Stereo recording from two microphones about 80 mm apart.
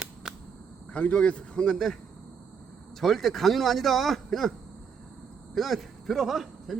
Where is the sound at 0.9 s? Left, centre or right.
Centre.